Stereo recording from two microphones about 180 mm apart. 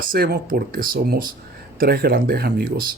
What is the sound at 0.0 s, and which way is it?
Speech, 55° right (ahead or behind).